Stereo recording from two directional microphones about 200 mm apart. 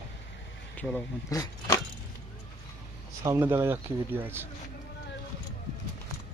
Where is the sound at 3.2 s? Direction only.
10° right (ahead or behind).